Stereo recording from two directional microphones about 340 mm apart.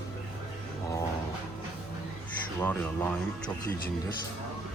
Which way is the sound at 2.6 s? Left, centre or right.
Centre.